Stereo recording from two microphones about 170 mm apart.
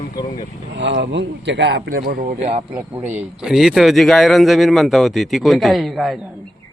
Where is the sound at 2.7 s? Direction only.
10° right (ahead or behind).